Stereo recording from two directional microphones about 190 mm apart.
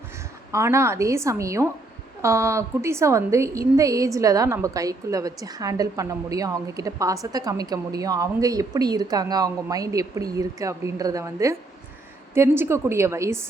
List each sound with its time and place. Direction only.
0.5 s a woman's voice: 15° right (ahead or behind)